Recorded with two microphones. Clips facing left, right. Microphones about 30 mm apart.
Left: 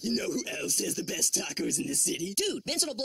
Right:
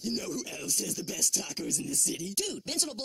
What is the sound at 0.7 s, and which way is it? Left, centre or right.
Speech, centre.